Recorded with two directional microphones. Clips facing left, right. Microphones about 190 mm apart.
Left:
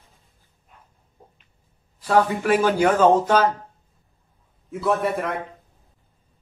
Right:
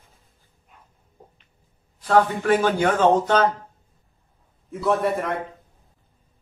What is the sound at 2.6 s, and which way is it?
Speech, 10° left (ahead or behind).